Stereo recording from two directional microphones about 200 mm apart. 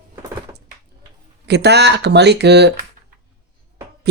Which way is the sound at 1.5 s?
55° right (ahead or behind).